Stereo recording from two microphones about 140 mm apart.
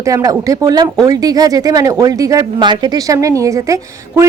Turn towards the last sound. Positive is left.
turn(degrees=-20)  # may be behind; listen again after turning